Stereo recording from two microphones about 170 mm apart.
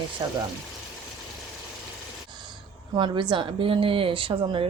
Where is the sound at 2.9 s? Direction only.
25° right (ahead or behind).